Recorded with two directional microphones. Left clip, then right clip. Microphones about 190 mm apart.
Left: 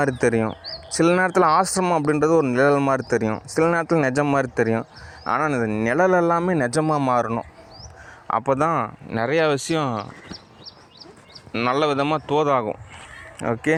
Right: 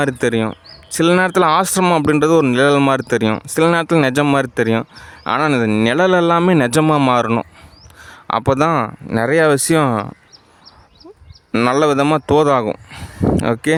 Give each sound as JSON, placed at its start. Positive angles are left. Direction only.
{"t": 0.1, "sound": "speech", "side_deg": -30}
{"t": 0.5, "sound": "speech", "side_deg": -50}
{"t": 1.0, "sound": "speech", "side_deg": -35}
{"t": 1.6, "sound": "speech", "side_deg": -55}
{"t": 3.0, "sound": "speech", "side_deg": -35}
{"t": 4.1, "sound": "speech", "side_deg": -50}
{"t": 5.8, "sound": "speech", "side_deg": -30}
{"t": 6.7, "sound": "speech", "side_deg": -65}
{"t": 8.3, "sound": "speech", "side_deg": -35}
{"t": 8.7, "sound": "speech", "side_deg": -50}
{"t": 11.5, "sound": "speech", "side_deg": -45}